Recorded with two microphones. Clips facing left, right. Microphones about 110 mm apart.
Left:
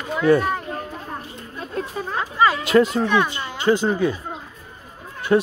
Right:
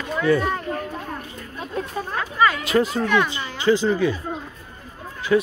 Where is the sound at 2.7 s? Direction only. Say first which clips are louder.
Left 4 dB; 60° left (ahead or behind).